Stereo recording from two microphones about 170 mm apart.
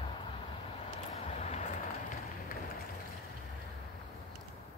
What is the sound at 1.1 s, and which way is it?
Vehicle, 40° left (ahead or behind).